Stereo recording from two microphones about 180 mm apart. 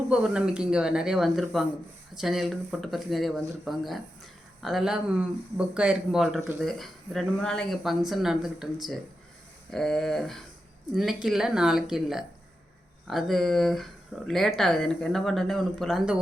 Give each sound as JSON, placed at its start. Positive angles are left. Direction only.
{"t": 0.1, "sound": "speech", "side_deg": -5}